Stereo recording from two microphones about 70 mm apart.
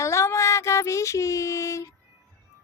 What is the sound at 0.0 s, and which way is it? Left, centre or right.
Child singing, left.